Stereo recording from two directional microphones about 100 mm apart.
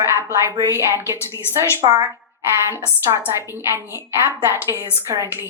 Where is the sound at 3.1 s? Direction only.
50° right (ahead or behind).